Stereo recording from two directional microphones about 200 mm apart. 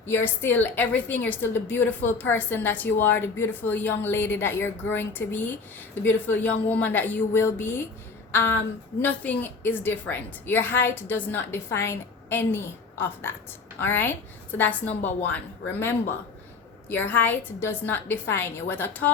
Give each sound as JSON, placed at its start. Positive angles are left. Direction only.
{"t": 0.0, "sound": "a woman's voice", "side_deg": 10}
{"t": 8.3, "sound": "a sound", "side_deg": 10}
{"t": 9.0, "sound": "a woman's voice", "side_deg": 10}
{"t": 16.9, "sound": "a woman's voice", "side_deg": 10}